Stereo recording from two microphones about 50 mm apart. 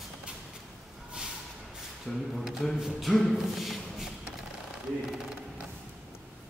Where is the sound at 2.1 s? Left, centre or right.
Centre.